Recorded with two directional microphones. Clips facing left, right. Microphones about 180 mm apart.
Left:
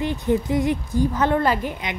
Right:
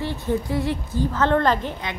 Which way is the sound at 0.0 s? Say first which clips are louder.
Left 3 dB; 15° left (ahead or behind).